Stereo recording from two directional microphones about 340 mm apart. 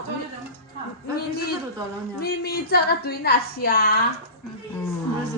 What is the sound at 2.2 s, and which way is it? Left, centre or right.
A woman's voice, left.